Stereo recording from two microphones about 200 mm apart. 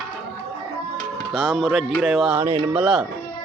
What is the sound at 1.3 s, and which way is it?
Speech, centre (ahead or behind).